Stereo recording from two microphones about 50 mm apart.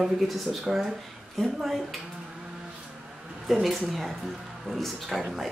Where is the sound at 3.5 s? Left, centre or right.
Centre.